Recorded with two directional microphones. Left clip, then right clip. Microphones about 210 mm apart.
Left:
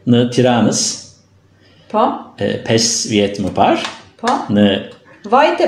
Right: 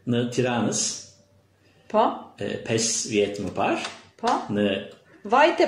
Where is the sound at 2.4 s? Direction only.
40° left (ahead or behind).